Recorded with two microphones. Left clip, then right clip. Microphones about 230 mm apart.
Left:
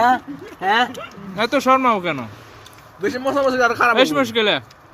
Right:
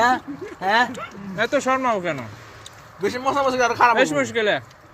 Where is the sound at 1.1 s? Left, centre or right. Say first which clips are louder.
Left 2 dB; centre.